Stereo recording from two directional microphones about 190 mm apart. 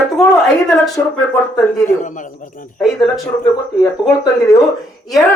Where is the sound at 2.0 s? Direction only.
40° left (ahead or behind).